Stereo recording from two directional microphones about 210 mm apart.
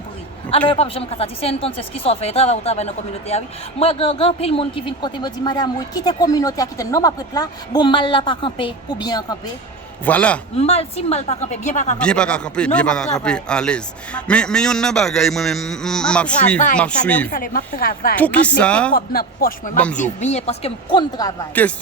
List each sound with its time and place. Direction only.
0.7 s speech: 25° left (ahead or behind)
10.1 s speech: 5° left (ahead or behind)
10.6 s a woman's voice: 30° left (ahead or behind)
11.9 s a man's voice: 5° left (ahead or behind)
17.3 s speech: 40° left (ahead or behind)
18.2 s a man's voice: 5° left (ahead or behind)
18.9 s speech: 45° left (ahead or behind)
19.7 s a man's voice: 5° left (ahead or behind)
20.0 s a woman's voice: 35° left (ahead or behind)
21.2 s speech: 10° left (ahead or behind)